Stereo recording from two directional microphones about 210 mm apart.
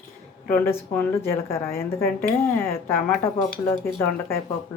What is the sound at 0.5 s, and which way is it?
Speech, 10° left (ahead or behind).